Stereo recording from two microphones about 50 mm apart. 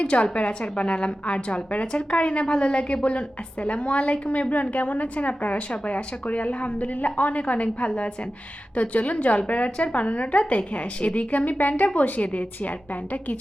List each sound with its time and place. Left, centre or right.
0.0 s a woman's voice: left